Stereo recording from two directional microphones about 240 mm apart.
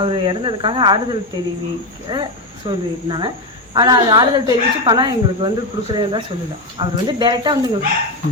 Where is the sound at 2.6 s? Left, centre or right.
Centre.